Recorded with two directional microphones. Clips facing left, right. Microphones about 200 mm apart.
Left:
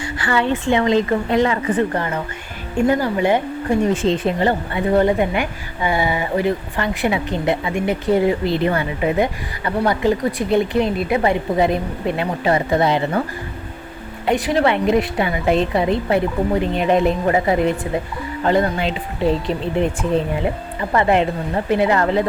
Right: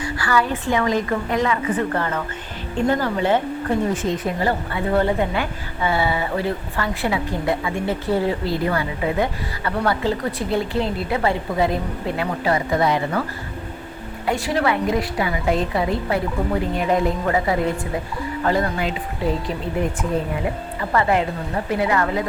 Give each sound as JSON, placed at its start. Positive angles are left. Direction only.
{"t": 0.0, "sound": "a sound", "side_deg": 25}
{"t": 0.6, "sound": "a woman's voice", "side_deg": 25}
{"t": 1.9, "sound": "speech", "side_deg": 15}
{"t": 3.9, "sound": "a woman's voice", "side_deg": 30}
{"t": 14.3, "sound": "a woman's voice", "side_deg": 20}
{"t": 20.9, "sound": "a woman's voice", "side_deg": 20}